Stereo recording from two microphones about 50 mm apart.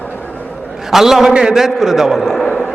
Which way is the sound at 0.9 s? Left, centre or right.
Centre.